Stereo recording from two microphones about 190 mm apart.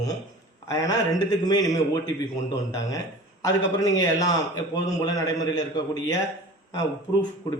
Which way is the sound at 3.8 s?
20° left (ahead or behind).